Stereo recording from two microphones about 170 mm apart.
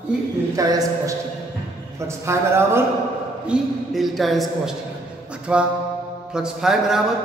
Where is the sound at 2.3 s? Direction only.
15° right (ahead or behind).